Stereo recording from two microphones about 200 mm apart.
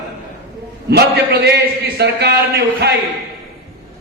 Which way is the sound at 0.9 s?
55° right (ahead or behind).